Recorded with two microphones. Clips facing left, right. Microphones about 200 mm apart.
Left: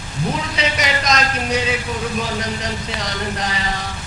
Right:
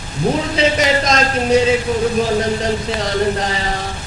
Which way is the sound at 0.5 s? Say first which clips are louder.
Right 7 dB; 30° right (ahead or behind).